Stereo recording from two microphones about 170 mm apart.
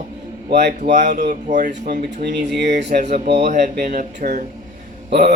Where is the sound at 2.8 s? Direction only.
40° right (ahead or behind).